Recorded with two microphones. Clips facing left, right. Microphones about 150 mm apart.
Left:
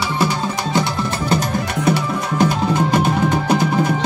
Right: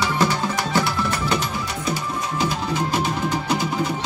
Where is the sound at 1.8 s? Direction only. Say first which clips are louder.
Left 10 dB; 70° left (ahead or behind).